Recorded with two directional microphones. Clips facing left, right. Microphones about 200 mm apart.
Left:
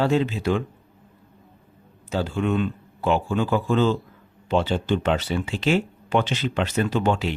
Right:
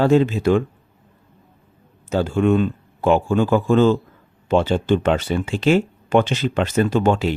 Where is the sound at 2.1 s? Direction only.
50° right (ahead or behind).